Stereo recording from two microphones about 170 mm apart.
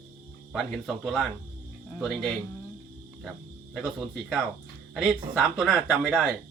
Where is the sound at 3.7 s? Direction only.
Centre (ahead or behind).